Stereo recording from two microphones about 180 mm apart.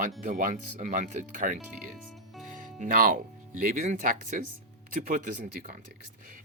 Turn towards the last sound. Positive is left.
turn(degrees=-45)  # may be behind; listen again after turning